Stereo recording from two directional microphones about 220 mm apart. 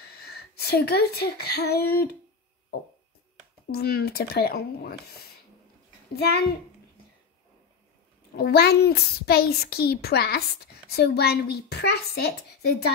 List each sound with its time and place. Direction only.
0.0 s speech: 45° left (ahead or behind)
3.7 s a child's voice: 45° left (ahead or behind)
8.4 s a child's voice: 45° left (ahead or behind)